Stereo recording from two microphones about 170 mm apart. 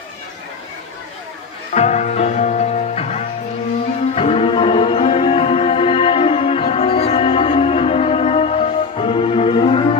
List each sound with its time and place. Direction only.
1.7 s music: 40° left (ahead or behind)